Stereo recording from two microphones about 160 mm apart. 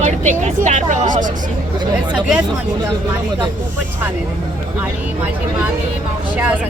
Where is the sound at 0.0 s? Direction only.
50° right (ahead or behind).